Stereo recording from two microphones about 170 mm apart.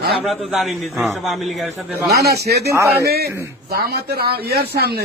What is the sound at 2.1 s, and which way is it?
Speech, 70° right (ahead or behind).